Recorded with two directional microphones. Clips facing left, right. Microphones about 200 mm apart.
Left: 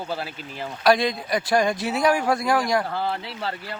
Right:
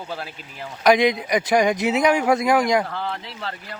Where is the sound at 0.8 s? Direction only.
20° right (ahead or behind).